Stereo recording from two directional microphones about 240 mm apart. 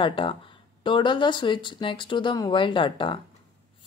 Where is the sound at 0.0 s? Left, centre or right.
Left.